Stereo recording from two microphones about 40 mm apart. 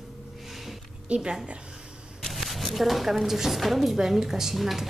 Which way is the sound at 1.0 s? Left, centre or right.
Right.